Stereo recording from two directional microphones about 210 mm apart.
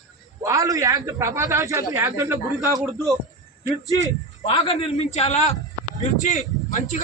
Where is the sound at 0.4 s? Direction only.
15° right (ahead or behind).